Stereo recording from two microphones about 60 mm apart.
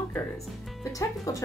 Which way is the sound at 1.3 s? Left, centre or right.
Left.